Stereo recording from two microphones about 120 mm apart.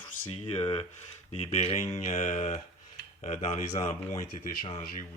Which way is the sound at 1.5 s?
65° left (ahead or behind).